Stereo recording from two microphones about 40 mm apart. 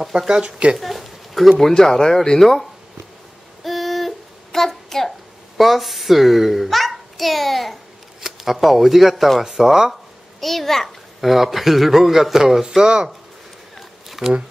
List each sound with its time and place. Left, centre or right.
0.3 s speech: right
0.7 s a sound: centre
1.7 s speech: centre
3.6 s child singing: centre
5.6 s a child's voice: centre
9.4 s a man's voice: centre
10.4 s a child's voice: centre
12.6 s speech: right
14.2 s speech: centre